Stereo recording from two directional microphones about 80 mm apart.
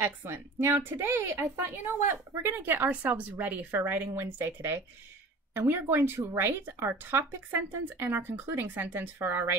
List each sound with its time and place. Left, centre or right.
0.0 s a woman's voice: right